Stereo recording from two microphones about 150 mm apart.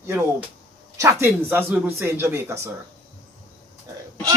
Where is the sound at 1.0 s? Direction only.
15° right (ahead or behind).